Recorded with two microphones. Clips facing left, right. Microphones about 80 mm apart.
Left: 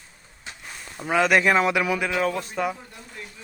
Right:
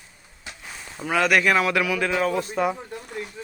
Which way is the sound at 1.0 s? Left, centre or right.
Centre.